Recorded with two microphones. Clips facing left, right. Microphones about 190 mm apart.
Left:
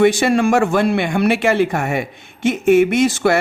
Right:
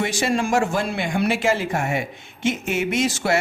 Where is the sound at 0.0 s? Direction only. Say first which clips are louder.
Left 9 dB; 60° left (ahead or behind).